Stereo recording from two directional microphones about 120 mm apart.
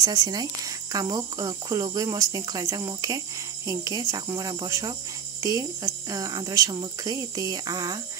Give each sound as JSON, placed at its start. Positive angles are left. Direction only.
{"t": 0.0, "sound": "speech", "side_deg": -30}